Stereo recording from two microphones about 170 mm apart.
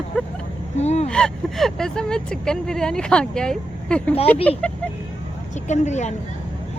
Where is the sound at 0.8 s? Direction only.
40° left (ahead or behind).